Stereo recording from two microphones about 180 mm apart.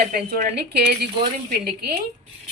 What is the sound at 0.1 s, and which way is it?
A woman's voice, 55° right (ahead or behind).